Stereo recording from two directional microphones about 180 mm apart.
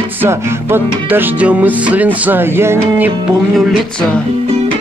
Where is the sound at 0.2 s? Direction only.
15° right (ahead or behind).